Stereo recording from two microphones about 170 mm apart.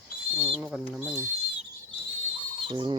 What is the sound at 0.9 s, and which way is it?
Speech, 10° right (ahead or behind).